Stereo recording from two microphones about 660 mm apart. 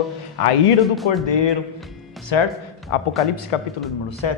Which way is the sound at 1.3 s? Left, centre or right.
Left.